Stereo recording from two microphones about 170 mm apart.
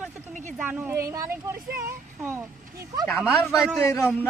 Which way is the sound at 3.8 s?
15° left (ahead or behind).